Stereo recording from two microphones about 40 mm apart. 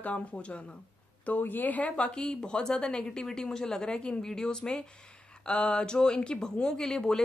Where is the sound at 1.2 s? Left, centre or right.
Left.